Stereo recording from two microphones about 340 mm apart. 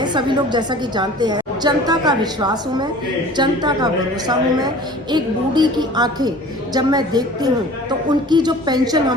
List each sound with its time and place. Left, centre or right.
0.0 s a woman's voice: centre